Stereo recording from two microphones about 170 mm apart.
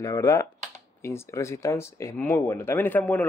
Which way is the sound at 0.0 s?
20° left (ahead or behind).